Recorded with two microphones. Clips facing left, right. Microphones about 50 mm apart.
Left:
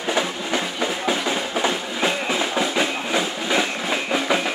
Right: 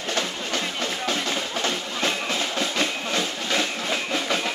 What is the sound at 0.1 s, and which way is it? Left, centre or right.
Music, centre.